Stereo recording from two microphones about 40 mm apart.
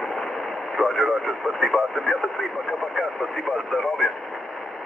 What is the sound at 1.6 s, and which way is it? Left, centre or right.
Radio, centre.